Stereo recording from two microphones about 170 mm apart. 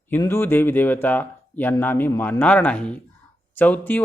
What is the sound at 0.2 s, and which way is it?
Speech, 15° left (ahead or behind).